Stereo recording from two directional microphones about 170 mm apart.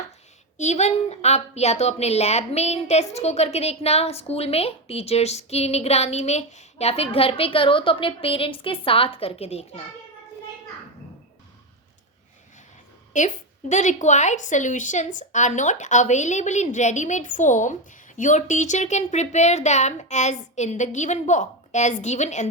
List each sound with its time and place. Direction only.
0.5 s a woman's voice: 40° left (ahead or behind)
13.1 s a woman's voice: 45° left (ahead or behind)